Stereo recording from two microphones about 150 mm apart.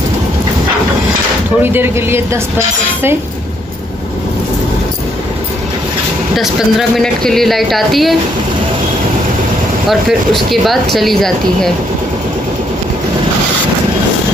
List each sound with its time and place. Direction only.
1.6 s speech: 15° right (ahead or behind)
6.3 s speech: centre (ahead or behind)
9.8 s speech: centre (ahead or behind)